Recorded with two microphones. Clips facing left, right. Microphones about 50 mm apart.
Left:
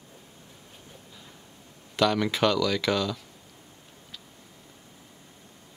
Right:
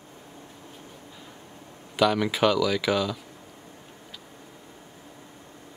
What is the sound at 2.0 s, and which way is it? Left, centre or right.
Speech, centre.